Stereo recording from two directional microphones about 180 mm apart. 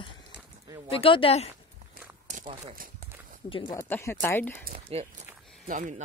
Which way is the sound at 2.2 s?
45° right (ahead or behind).